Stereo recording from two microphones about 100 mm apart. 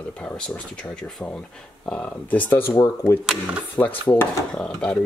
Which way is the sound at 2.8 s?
30° left (ahead or behind).